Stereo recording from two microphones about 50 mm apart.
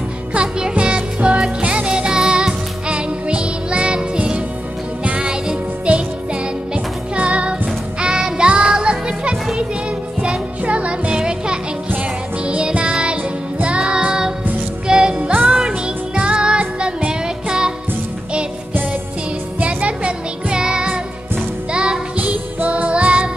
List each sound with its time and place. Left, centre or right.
0.3 s music: centre
19.6 s music: right
22.1 s music: right